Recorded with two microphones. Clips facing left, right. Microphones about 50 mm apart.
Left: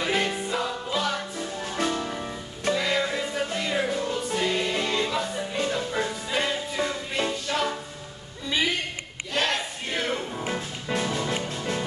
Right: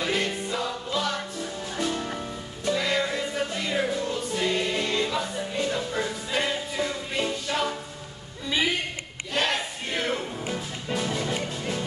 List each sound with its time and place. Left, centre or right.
0.0 s music: centre
1.6 s music: left
2.7 s music: centre
8.5 s a sound: centre
9.3 s battle cry: centre
10.4 s music: left